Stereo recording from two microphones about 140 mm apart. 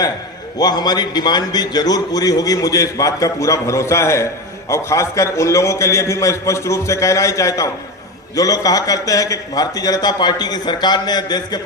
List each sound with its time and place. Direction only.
0.6 s a man's voice: 30° left (ahead or behind)